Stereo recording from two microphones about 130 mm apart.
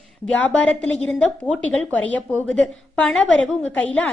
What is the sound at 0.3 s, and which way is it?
A woman's voice, 10° left (ahead or behind).